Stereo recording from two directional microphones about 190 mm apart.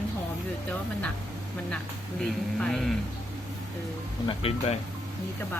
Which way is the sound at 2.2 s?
5° left (ahead or behind).